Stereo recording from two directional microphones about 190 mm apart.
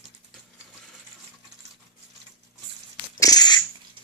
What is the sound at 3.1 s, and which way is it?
Dog, 20° left (ahead or behind).